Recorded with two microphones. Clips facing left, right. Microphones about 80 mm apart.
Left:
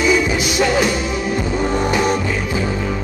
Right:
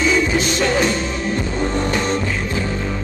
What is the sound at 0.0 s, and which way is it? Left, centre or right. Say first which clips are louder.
Music: left 1 dB; centre.